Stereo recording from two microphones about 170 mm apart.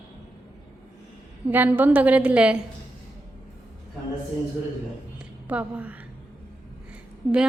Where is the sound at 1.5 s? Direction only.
10° right (ahead or behind).